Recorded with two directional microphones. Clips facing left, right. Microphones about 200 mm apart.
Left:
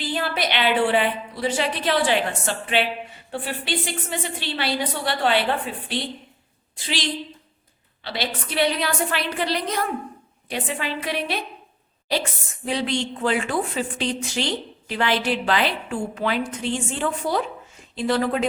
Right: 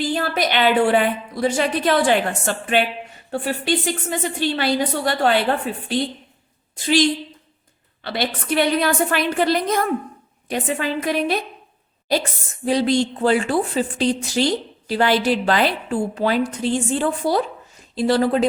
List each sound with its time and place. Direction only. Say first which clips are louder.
0.0 s a woman's voice: right 4 dB; 45° right (ahead or behind)
12.6 s a woman's voice: right 7 dB; 40° right (ahead or behind)